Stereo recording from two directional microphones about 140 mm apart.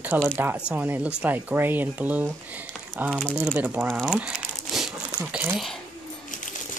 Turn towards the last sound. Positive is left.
turn(degrees=-10)  # may be behind; listen again after turning